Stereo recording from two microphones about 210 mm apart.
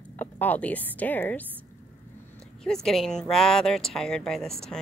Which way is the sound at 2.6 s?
Centre (ahead or behind).